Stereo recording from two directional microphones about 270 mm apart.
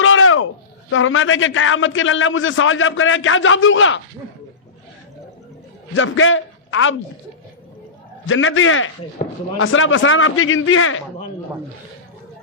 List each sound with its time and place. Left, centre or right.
0.0 s a sound: left
0.9 s a man's voice: left
5.9 s a man's voice: left
8.3 s a man's voice: left
9.2 s speech: left
9.6 s a man's voice: left